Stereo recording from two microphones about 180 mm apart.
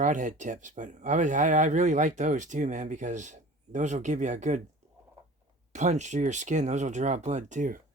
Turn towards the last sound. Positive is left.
turn(degrees=-45)  # may be behind; listen again after turning